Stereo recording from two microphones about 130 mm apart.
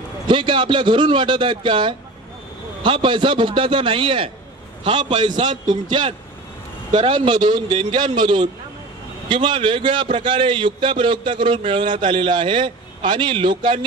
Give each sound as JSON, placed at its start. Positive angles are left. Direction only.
{"t": 0.3, "sound": "a man's voice", "side_deg": -40}